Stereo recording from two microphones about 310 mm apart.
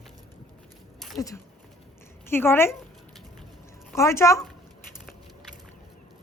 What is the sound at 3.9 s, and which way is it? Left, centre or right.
Speech, centre.